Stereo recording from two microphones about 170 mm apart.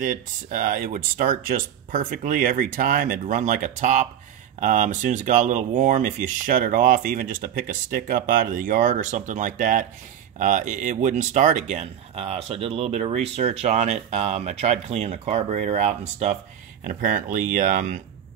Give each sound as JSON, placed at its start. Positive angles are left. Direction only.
{"t": 0.0, "sound": "speech", "side_deg": -50}